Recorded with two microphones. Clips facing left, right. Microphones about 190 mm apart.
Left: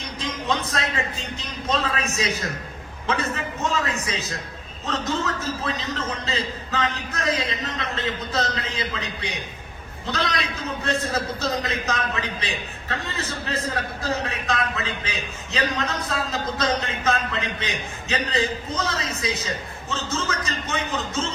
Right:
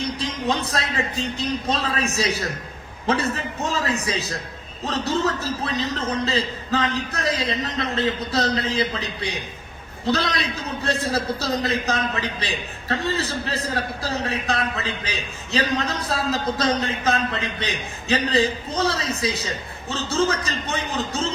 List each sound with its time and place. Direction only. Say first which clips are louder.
0.2 s a man's voice: left 3 dB; 35° right (ahead or behind)
10.1 s a man's voice: right 4 dB; 35° right (ahead or behind)